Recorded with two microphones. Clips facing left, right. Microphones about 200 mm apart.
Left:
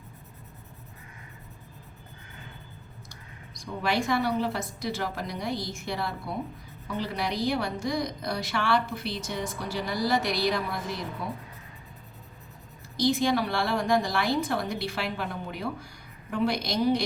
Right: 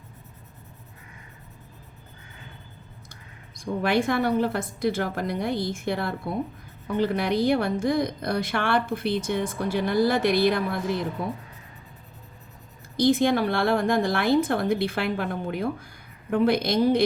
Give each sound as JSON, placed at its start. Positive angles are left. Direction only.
{"t": 3.1, "sound": "a woman's voice", "side_deg": -55}
{"t": 13.0, "sound": "speech", "side_deg": -55}